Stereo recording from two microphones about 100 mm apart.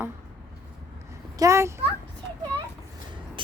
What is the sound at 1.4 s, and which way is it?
Speech, 30° right (ahead or behind).